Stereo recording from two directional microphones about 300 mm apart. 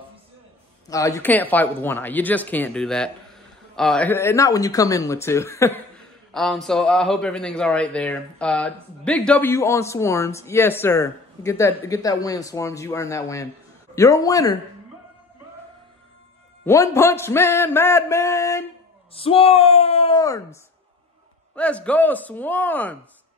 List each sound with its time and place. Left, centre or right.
0.8 s speech: centre
16.6 s speech: centre
21.5 s speech: centre